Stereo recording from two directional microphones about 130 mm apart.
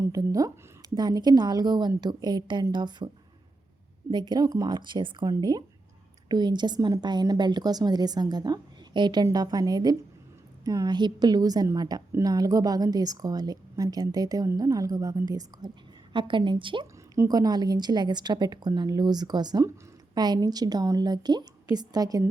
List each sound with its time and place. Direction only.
0.0 s a woman's voice: 25° right (ahead or behind)
4.1 s a woman's voice: 35° right (ahead or behind)
16.8 s a woman's voice: 25° right (ahead or behind)